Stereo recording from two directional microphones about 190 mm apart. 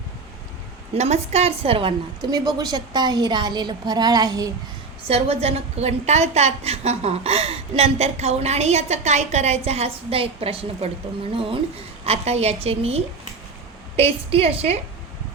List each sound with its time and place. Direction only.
0.9 s a woman's voice: 35° right (ahead or behind); by 4.5 s 20° right (ahead or behind)
5.0 s a woman's voice: 30° right (ahead or behind)
12.0 s a woman's voice: 35° right (ahead or behind)